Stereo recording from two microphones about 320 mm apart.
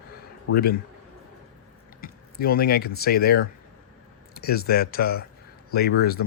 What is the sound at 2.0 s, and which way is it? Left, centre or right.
Speech, left.